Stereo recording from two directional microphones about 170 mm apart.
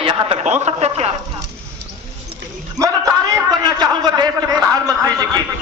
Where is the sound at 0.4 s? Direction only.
40° right (ahead or behind).